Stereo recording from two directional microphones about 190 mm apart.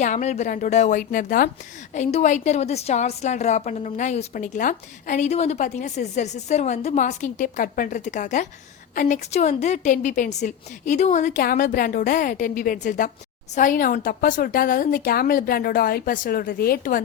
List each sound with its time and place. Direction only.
0.0 s a woman's voice: 40° left (ahead or behind)